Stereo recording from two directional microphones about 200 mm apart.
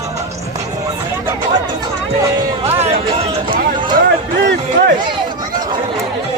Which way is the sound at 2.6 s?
30° right (ahead or behind).